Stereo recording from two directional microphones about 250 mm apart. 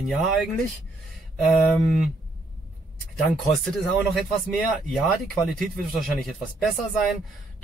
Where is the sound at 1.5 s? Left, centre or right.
Centre.